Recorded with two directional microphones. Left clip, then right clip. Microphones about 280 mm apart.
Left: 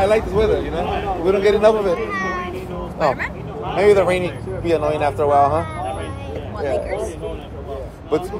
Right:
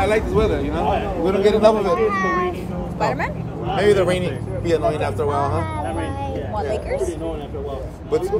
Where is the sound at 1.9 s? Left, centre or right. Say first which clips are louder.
Right 4 dB; right.